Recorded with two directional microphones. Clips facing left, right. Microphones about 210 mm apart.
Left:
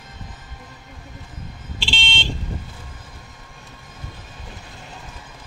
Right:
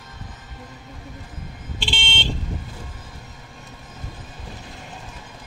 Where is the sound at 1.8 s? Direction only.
50° right (ahead or behind).